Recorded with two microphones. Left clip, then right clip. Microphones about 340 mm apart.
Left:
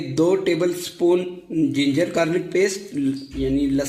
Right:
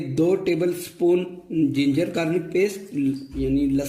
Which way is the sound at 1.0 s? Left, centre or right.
Left.